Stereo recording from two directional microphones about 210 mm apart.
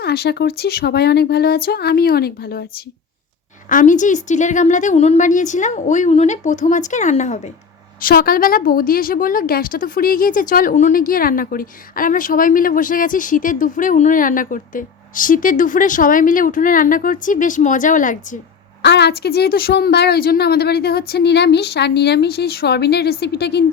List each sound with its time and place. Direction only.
0.0 s a woman's voice: 50° left (ahead or behind); by 7.5 s 35° left (ahead or behind)
8.0 s a woman's voice: 45° left (ahead or behind)
18.8 s speech: 55° left (ahead or behind)